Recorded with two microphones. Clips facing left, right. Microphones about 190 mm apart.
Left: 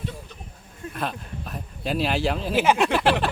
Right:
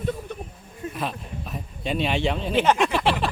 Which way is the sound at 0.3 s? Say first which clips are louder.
Right 10 dB; 60° right (ahead or behind).